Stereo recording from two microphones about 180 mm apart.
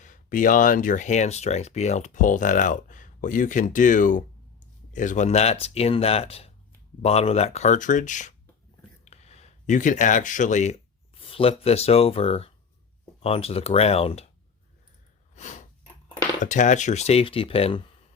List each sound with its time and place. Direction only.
0.0 s speech: 45° left (ahead or behind)
15.4 s a sound: 45° left (ahead or behind)
16.4 s speech: 45° left (ahead or behind)